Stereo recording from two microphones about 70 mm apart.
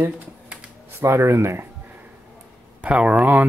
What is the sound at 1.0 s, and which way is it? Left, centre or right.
Speech, right.